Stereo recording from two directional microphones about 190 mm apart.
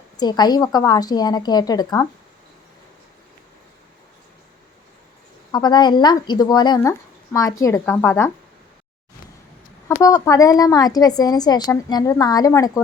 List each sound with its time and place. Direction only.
0.2 s a woman's voice: 20° left (ahead or behind)
5.5 s a woman's voice: 20° left (ahead or behind)
9.9 s a woman's voice: 20° left (ahead or behind)